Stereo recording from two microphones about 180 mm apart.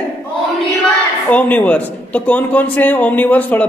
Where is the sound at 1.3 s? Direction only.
10° left (ahead or behind).